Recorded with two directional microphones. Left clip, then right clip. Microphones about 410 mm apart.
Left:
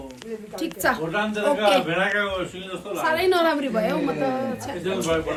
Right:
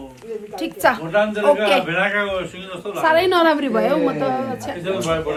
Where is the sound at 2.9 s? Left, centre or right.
Right.